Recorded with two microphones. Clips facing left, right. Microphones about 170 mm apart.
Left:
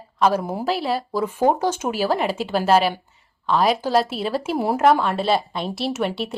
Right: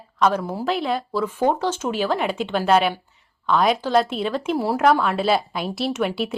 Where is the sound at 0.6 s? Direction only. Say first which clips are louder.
Even; 5° left (ahead or behind).